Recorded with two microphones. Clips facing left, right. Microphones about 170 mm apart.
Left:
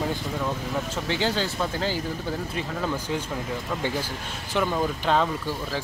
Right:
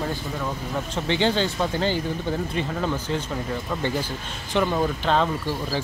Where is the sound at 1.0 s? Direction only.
5° left (ahead or behind).